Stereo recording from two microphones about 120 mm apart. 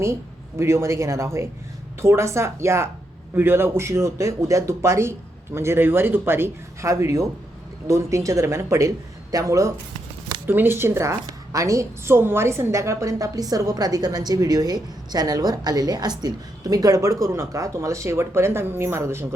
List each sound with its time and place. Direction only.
0.0 s a woman's voice: 25° right (ahead or behind)